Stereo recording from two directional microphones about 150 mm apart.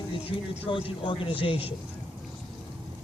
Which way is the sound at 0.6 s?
35° left (ahead or behind).